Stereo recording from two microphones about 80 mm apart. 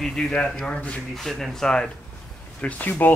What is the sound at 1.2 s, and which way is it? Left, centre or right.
Speech, centre.